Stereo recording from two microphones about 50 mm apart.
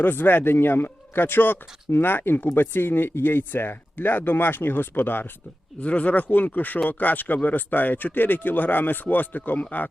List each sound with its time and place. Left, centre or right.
0.0 s a man's voice: left
5.8 s speech: left